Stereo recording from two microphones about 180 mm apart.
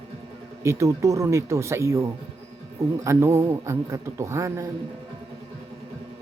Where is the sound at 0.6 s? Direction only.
15° right (ahead or behind).